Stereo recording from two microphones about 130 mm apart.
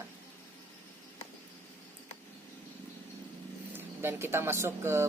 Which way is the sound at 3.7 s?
20° right (ahead or behind).